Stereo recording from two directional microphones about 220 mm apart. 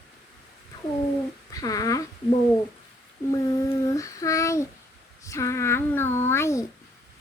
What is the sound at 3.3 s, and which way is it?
Child singing, 15° left (ahead or behind).